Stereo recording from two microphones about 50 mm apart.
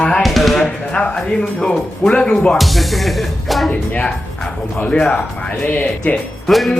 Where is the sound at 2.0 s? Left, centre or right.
Centre.